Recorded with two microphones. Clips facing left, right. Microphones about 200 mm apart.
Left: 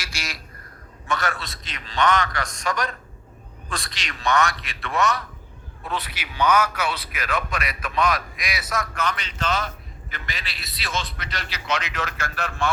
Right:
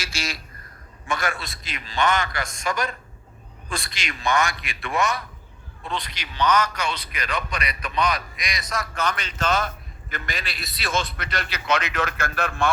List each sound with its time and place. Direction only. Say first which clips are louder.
0.0 s a sound: right 4 dB; 25° right (ahead or behind)
1.0 s a man's voice: even; 10° right (ahead or behind)
5.8 s a man's voice: left 1 dB; 5° left (ahead or behind)
9.0 s a man's voice: right 1 dB; 45° right (ahead or behind)